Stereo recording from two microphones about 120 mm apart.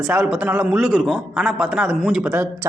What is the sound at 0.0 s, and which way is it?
A man's voice, 5° right (ahead or behind).